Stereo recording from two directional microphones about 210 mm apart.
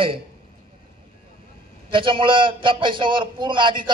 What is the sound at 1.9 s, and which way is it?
A man's voice, 25° right (ahead or behind).